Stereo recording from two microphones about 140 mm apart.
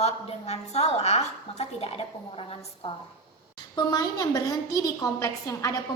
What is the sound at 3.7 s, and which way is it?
A woman's voice, 25° left (ahead or behind).